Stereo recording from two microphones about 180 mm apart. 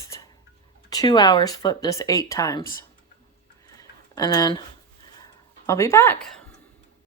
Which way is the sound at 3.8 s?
20° left (ahead or behind).